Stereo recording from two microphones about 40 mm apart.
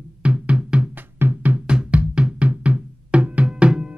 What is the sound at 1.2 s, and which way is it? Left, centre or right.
Music, right.